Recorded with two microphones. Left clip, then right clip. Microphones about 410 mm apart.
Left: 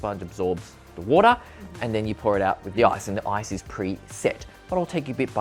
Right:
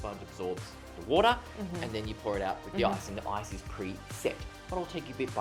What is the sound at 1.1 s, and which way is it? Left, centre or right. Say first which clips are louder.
Speech: left 9 dB; left.